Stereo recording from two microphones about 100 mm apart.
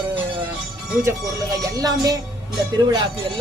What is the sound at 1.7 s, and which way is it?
Speech, 35° right (ahead or behind).